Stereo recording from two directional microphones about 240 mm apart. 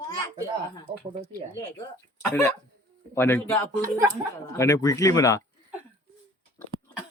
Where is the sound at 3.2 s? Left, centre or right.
Centre.